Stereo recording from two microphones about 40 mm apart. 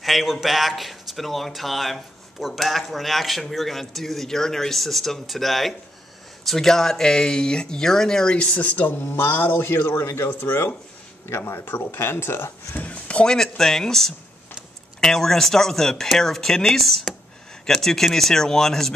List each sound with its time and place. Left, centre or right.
0.0 s speech: centre
8.5 s speech: left
9.0 s speech: left
11.3 s speech: left
11.6 s speech: left
12.7 s a sound: left
13.2 s speech: centre